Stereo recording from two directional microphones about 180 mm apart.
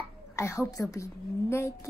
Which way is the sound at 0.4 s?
15° left (ahead or behind).